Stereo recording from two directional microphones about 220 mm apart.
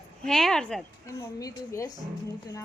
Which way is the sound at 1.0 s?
15° left (ahead or behind).